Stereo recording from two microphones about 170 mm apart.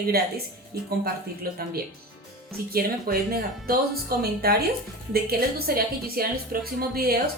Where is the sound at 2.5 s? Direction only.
60° right (ahead or behind).